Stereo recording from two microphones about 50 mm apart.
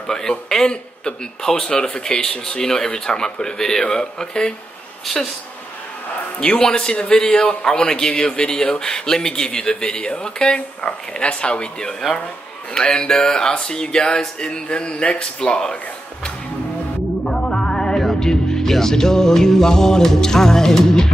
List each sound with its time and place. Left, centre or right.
0.0 s a man's voice: centre
5.0 s speech: centre
6.5 s a man's voice: centre
17.2 s speech: centre